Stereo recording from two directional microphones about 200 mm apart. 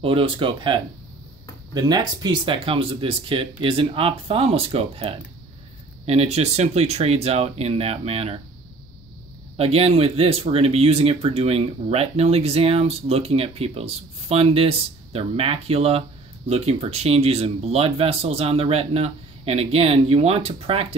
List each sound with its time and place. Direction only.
0.0 s speech: 25° right (ahead or behind)
9.6 s speech: 30° right (ahead or behind)